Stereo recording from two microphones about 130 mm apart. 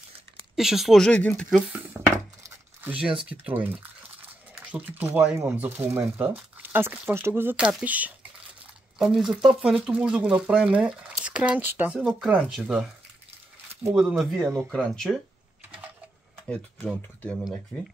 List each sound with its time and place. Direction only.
0.6 s speech: centre (ahead or behind)
1.5 s speech: 10° right (ahead or behind)
4.2 s a sound: 10° right (ahead or behind)
5.4 s speech: 20° right (ahead or behind); by 12.8 s centre (ahead or behind)
13.9 s speech: 5° right (ahead or behind)
14.7 s speech: 5° left (ahead or behind)
16.4 s speech: 10° left (ahead or behind)